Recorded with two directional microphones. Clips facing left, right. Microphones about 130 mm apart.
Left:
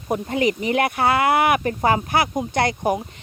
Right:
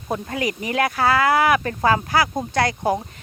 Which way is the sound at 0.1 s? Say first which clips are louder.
Left 4 dB; 25° left (ahead or behind).